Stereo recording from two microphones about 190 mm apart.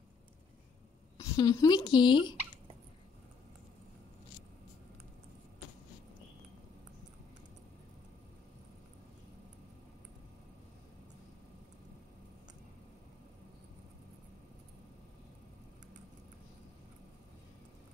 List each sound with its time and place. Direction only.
1.1 s speech: 20° left (ahead or behind)